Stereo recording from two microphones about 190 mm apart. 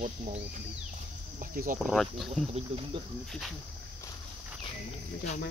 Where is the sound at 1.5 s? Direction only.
45° right (ahead or behind).